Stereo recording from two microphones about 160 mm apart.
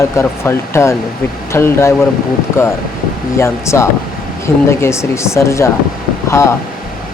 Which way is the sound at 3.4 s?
15° left (ahead or behind).